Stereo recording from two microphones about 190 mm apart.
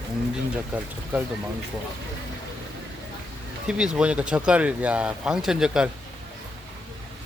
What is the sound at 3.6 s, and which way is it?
Speech, 5° right (ahead or behind).